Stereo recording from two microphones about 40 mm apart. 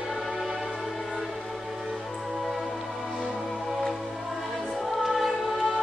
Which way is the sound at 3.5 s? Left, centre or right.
Centre.